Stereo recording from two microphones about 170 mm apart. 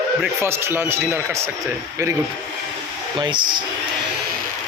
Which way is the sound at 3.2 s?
30° right (ahead or behind).